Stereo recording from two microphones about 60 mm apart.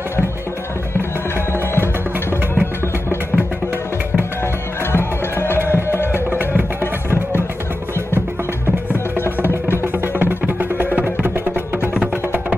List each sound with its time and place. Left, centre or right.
4.9 s music: left
10.1 s music: right